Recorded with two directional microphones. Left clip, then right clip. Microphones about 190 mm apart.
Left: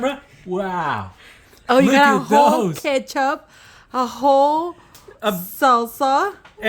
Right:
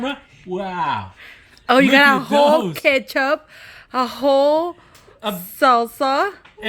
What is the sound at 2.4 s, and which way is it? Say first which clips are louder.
Speech: right 1 dB; 30° left (ahead or behind).